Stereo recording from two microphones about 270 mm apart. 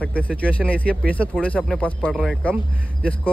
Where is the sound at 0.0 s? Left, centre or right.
Centre.